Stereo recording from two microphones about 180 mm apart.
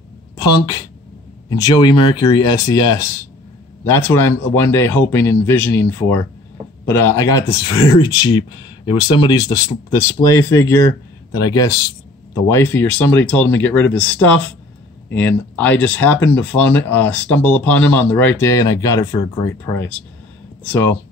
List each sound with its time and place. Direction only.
1.5 s speech: 25° left (ahead or behind)